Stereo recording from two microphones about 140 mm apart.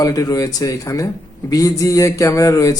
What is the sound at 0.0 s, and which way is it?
Speech, 25° left (ahead or behind).